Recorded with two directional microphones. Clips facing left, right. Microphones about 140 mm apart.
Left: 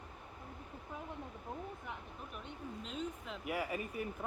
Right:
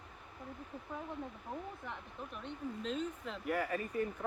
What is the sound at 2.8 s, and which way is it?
Speech, centre (ahead or behind).